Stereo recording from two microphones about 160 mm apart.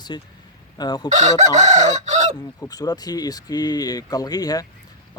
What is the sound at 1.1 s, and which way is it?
Chicken, 45° right (ahead or behind).